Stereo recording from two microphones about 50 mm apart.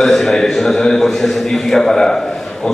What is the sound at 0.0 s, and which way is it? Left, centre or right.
A man's voice, centre.